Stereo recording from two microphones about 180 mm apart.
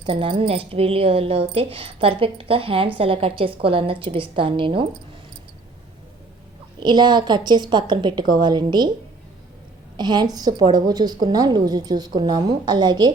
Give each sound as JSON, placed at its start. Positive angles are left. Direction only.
{"t": 0.0, "sound": "a woman's voice", "side_deg": -30}
{"t": 6.7, "sound": "a woman's voice", "side_deg": -25}
{"t": 10.0, "sound": "a woman's voice", "side_deg": -25}